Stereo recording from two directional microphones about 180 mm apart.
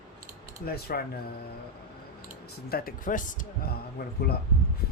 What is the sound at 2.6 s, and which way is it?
A man's voice, 55° left (ahead or behind).